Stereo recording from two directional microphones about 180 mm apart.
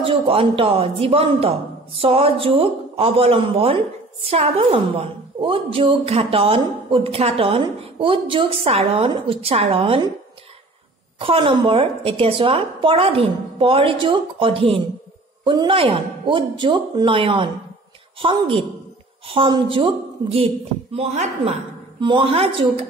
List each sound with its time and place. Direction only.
0.0 s a woman's voice: 30° right (ahead or behind)
11.1 s a woman's voice: 30° right (ahead or behind)